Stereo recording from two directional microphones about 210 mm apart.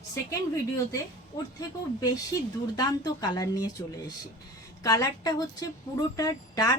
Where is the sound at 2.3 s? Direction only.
15° left (ahead or behind).